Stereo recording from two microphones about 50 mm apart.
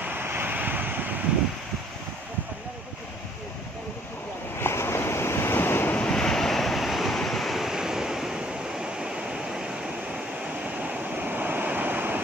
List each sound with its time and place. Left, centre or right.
0.0 s waves: right
4.6 s waves: left
6.1 s waves: centre
8.4 s a sound: centre
10.8 s waves: right